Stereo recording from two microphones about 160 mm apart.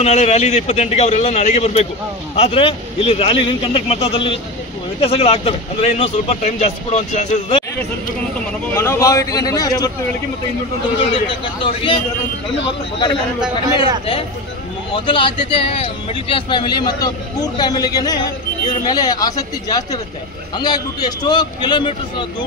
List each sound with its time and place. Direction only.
0.0 s a man's voice: 40° left (ahead or behind)
8.7 s a man's voice: 15° left (ahead or behind)
11.1 s a man's voice: 30° left (ahead or behind)
15.0 s a man's voice: 30° left (ahead or behind)